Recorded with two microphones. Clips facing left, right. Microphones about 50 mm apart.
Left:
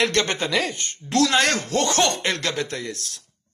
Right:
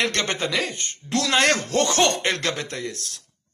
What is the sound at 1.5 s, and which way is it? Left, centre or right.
Speech, right.